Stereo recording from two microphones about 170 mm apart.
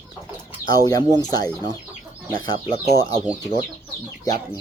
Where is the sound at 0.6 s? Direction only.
15° right (ahead or behind).